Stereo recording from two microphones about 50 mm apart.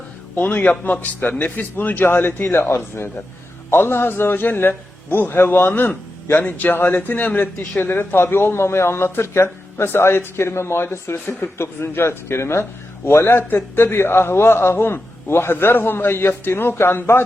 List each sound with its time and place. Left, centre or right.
0.3 s a man's voice: left
13.2 s a man's voice: left